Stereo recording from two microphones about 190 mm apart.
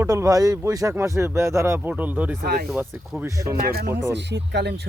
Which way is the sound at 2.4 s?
55° right (ahead or behind).